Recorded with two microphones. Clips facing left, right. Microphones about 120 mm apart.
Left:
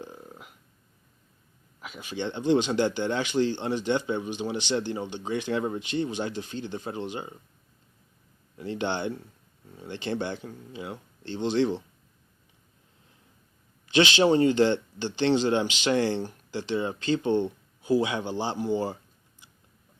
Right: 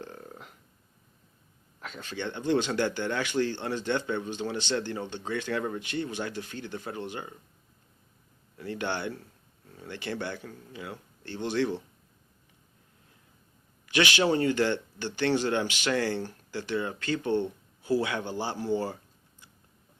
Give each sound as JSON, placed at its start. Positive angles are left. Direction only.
{"t": 0.0, "sound": "a sound", "side_deg": 10}
{"t": 1.8, "sound": "speech", "side_deg": 10}
{"t": 8.5, "sound": "speech", "side_deg": 20}
{"t": 13.8, "sound": "speech", "side_deg": 25}